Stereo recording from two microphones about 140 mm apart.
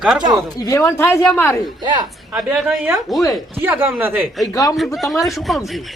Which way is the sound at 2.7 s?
15° right (ahead or behind).